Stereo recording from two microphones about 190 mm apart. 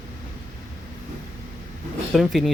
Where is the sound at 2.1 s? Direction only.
Centre (ahead or behind).